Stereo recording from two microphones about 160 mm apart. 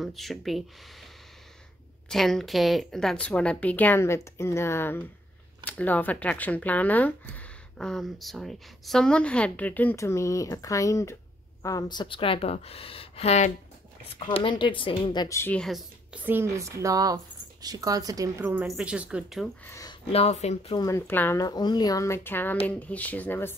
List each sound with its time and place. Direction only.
0.0 s speech: centre (ahead or behind)
2.0 s a woman's voice: centre (ahead or behind); by 15.2 s 30° left (ahead or behind)
15.2 s speech: 15° left (ahead or behind)
15.6 s speech: 5° right (ahead or behind)
19.6 s speech: 20° left (ahead or behind)
20.1 s a woman's voice: 40° left (ahead or behind)
20.7 s a woman's voice: 20° left (ahead or behind)